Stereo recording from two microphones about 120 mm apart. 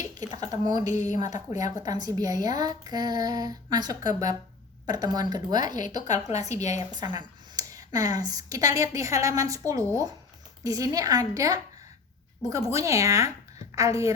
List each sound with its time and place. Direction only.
0.1 s speech: 30° right (ahead or behind)
0.9 s a woman's voice: 90° left
1.8 s speech: 30° right (ahead or behind)
6.5 s a woman's voice: 75° left (ahead or behind)
6.7 s speech: 35° right (ahead or behind)